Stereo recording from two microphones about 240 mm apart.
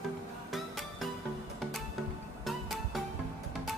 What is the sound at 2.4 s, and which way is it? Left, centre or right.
Music, centre.